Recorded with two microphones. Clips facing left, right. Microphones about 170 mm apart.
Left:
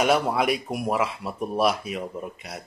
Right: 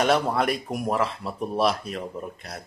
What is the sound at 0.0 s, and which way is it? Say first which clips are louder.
Speech: even; 10° left (ahead or behind).